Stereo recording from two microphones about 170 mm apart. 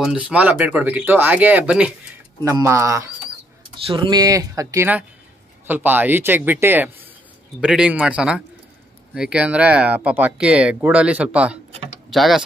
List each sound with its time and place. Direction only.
0.0 s speech: 5° right (ahead or behind)
3.7 s speech: 30° right (ahead or behind); by 12.4 s centre (ahead or behind)